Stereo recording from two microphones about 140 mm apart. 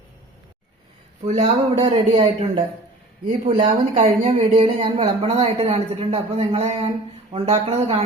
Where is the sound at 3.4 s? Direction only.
35° right (ahead or behind).